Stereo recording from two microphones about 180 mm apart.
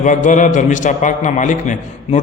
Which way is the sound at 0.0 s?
45° left (ahead or behind).